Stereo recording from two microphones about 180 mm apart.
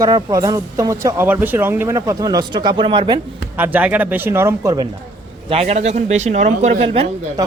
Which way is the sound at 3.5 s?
10° right (ahead or behind).